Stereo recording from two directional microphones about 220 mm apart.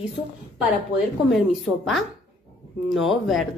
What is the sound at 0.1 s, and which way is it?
A woman's voice, centre (ahead or behind).